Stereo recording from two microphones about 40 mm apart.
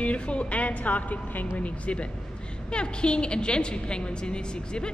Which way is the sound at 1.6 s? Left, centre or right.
Left.